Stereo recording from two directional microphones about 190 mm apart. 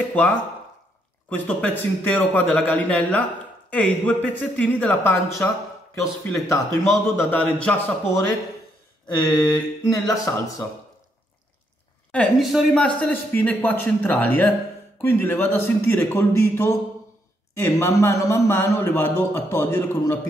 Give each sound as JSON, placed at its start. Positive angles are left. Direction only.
{"t": 0.1, "sound": "a man's voice", "side_deg": 10}
{"t": 9.5, "sound": "speech", "side_deg": 20}
{"t": 12.1, "sound": "a man's voice", "side_deg": 5}